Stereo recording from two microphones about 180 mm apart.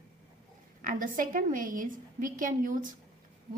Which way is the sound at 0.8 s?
50° right (ahead or behind).